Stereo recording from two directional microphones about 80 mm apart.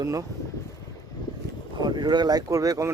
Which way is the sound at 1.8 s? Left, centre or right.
Right.